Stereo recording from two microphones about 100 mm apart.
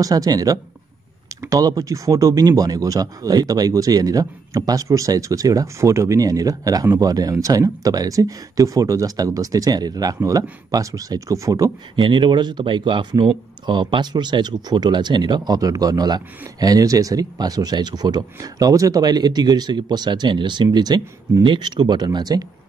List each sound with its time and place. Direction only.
0.0 s speech: 40° right (ahead or behind)
11.9 s speech: 50° right (ahead or behind)